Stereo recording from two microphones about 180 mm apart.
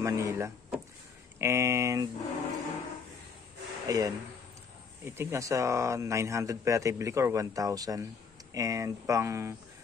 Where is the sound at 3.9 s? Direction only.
20° right (ahead or behind).